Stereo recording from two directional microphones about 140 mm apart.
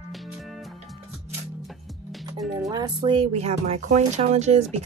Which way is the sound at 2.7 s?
30° right (ahead or behind).